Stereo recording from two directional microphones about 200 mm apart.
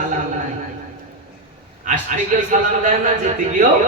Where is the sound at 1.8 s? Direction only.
40° right (ahead or behind).